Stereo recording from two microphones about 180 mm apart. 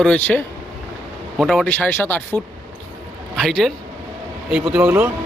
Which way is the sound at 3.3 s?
Centre (ahead or behind).